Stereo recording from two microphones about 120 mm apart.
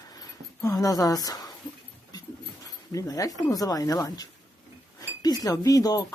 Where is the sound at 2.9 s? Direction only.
30° left (ahead or behind).